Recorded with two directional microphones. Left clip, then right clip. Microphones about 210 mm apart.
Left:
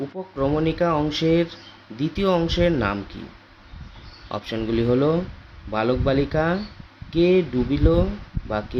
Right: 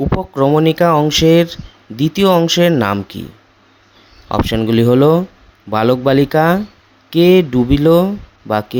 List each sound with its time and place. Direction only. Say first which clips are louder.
0.2 s speech: right 9 dB; 50° right (ahead or behind)
4.3 s speech: right 11 dB; 45° right (ahead or behind)